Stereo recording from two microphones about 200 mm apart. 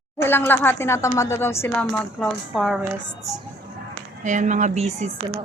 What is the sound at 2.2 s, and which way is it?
Speech, centre (ahead or behind).